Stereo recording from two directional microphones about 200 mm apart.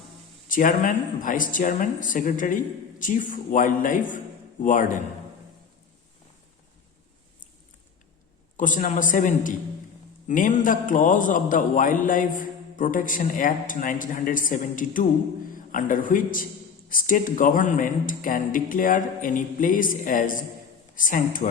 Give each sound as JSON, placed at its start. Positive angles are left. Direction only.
{"t": 0.4, "sound": "a man's voice", "side_deg": 40}
{"t": 8.5, "sound": "a man's voice", "side_deg": 40}